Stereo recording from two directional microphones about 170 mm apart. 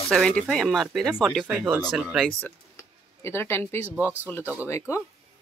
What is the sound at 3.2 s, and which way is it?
Speech, 15° left (ahead or behind).